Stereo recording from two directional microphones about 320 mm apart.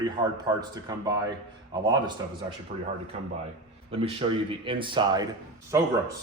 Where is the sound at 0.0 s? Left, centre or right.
Centre.